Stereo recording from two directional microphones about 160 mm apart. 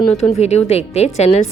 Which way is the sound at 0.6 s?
40° left (ahead or behind).